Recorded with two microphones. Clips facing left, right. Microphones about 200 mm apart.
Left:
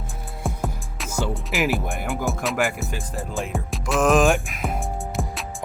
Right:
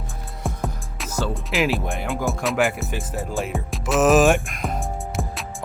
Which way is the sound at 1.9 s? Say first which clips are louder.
Right 1 dB; centre (ahead or behind).